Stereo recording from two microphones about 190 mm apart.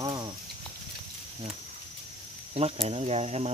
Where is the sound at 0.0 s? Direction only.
20° right (ahead or behind).